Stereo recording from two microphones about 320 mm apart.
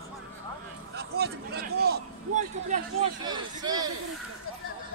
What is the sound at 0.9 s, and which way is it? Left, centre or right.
Speech, right.